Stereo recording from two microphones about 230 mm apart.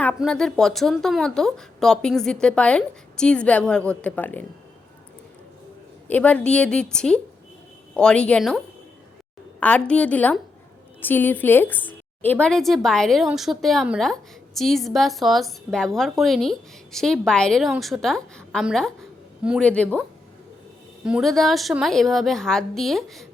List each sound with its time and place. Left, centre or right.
0.0 s a woman's voice: centre
6.1 s a woman's voice: centre
21.0 s a woman's voice: centre